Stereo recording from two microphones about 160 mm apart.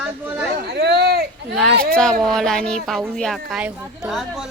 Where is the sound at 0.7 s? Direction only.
90° right.